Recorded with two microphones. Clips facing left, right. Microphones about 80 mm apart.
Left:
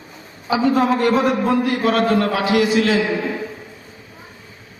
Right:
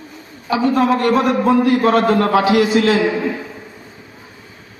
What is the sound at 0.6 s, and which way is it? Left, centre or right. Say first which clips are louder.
A man's voice: right 1 dB; centre.